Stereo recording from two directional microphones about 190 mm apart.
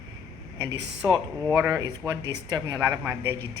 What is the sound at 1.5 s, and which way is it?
A woman's voice, 10° right (ahead or behind).